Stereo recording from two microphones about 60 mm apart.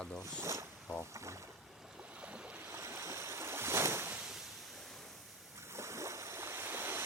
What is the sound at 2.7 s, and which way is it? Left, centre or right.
Waves, right.